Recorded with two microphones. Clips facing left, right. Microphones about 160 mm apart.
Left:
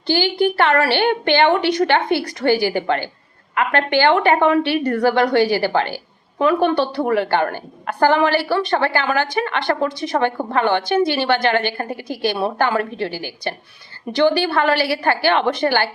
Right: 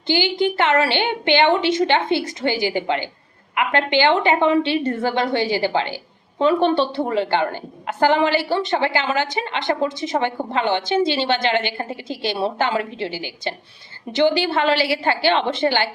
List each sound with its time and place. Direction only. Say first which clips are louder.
0.1 s a woman's voice: left 2 dB; 20° right (ahead or behind)
12.3 s a woman's voice: right 1 dB; 55° left (ahead or behind)
12.5 s a woman's voice: left 2 dB; 20° right (ahead or behind)